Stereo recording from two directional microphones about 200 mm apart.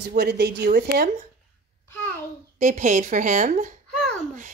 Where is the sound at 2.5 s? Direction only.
35° right (ahead or behind).